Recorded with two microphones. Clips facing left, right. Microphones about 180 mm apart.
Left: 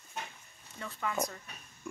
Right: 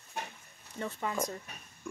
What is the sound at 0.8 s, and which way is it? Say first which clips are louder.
Speech: right 2 dB; 25° right (ahead or behind).